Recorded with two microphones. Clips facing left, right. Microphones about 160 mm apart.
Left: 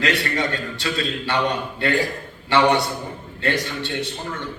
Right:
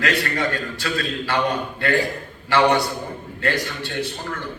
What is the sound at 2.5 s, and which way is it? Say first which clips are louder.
A man's voice: even; 25° left (ahead or behind).